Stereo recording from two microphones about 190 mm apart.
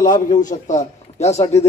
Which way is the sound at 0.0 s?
45° left (ahead or behind).